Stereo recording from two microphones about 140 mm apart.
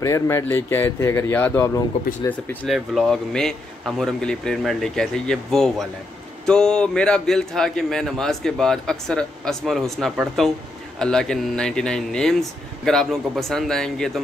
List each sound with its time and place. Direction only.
0.0 s speech: 20° left (ahead or behind)
2.7 s a man's voice: centre (ahead or behind)